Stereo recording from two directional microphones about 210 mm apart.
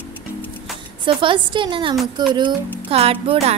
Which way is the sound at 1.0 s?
25° right (ahead or behind).